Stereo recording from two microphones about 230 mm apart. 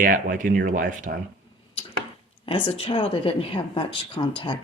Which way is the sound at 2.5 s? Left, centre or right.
Left.